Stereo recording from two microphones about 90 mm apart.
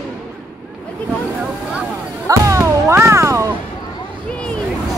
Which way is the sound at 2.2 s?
35° right (ahead or behind).